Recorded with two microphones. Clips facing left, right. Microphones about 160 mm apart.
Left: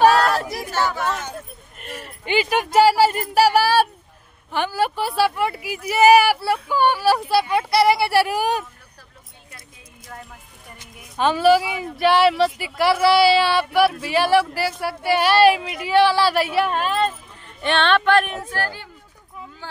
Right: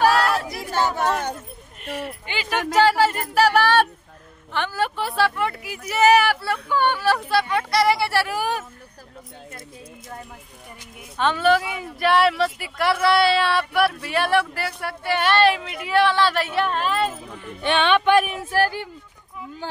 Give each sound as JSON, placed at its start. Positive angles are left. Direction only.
{"t": 0.5, "sound": "chatter", "side_deg": -20}
{"t": 0.9, "sound": "a sound", "side_deg": -50}
{"t": 1.8, "sound": "a sound", "side_deg": 45}
{"t": 2.2, "sound": "speech", "side_deg": 15}
{"t": 11.1, "sound": "speech", "side_deg": 10}
{"t": 17.6, "sound": "speech", "side_deg": -10}